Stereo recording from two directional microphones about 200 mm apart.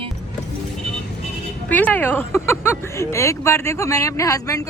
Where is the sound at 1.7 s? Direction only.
10° left (ahead or behind).